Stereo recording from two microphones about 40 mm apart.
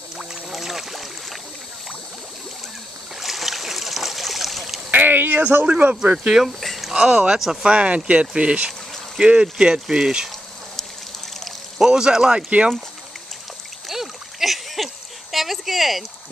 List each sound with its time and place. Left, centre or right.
0.2 s boat: centre
3.2 s boat: centre
4.9 s a sound: right
5.7 s speech: right
6.4 s a sound: centre
6.9 s speech: centre
7.6 s speech: right
11.8 s speech: centre
12.4 s speech: right
13.8 s splash: centre
15.3 s speech: centre